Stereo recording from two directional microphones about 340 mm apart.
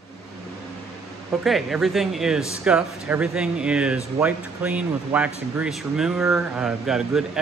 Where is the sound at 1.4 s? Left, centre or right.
Centre.